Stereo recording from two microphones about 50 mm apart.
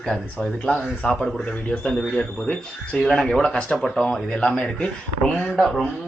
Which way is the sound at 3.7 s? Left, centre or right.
Centre.